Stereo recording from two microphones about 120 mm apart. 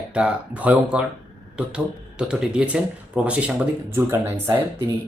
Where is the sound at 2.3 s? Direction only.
10° right (ahead or behind).